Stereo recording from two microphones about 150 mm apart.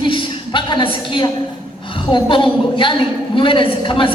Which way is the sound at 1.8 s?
35° left (ahead or behind).